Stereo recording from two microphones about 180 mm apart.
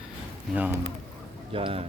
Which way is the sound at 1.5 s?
30° right (ahead or behind).